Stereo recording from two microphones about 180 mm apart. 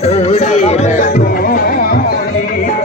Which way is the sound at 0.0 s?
35° left (ahead or behind).